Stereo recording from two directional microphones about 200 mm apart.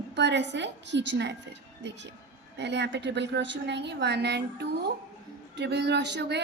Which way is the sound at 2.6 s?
60° right (ahead or behind).